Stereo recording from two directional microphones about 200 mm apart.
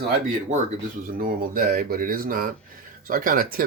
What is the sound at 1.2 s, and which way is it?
Speech, 45° right (ahead or behind).